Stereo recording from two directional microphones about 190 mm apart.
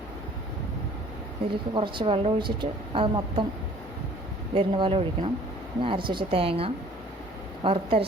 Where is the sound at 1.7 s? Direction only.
25° right (ahead or behind).